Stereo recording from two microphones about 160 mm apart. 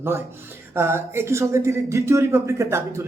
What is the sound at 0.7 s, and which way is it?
Speech, 15° right (ahead or behind).